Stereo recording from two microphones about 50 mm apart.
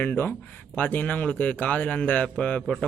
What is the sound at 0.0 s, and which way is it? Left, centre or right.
A man's voice, left.